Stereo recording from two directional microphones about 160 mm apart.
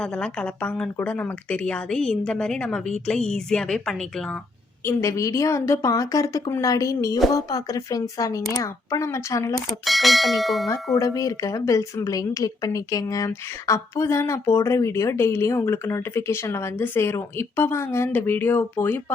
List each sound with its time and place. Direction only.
0.0 s a woman's voice: 5° left (ahead or behind)
4.9 s speech: 20° left (ahead or behind)
9.6 s speech: centre (ahead or behind)
10.9 s a woman's voice: 20° left (ahead or behind)